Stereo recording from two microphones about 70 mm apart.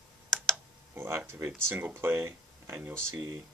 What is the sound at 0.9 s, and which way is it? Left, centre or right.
Speech, right.